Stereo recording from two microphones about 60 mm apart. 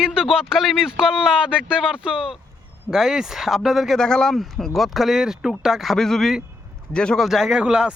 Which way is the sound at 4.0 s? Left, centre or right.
Centre.